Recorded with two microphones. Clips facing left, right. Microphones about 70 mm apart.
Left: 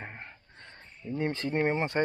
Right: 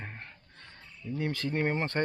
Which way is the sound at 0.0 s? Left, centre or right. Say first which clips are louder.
Left 1 dB; centre.